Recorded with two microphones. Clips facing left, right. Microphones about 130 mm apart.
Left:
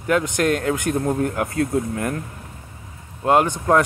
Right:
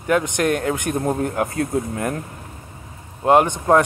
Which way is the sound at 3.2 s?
20° right (ahead or behind).